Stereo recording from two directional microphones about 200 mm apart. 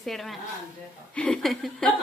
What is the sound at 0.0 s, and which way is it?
A woman's voice, centre (ahead or behind).